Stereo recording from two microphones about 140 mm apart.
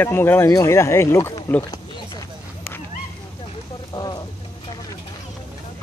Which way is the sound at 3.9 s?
30° left (ahead or behind).